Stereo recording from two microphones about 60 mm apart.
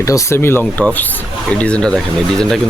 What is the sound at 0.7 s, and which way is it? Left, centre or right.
Speech, left.